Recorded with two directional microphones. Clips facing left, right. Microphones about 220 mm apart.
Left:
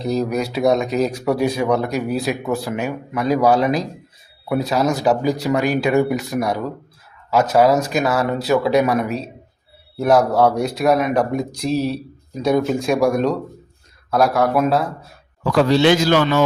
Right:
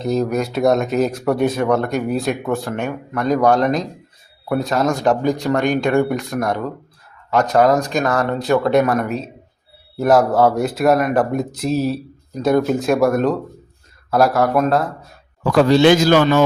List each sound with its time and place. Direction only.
0.0 s speech: centre (ahead or behind)
15.5 s a man's voice: 50° right (ahead or behind)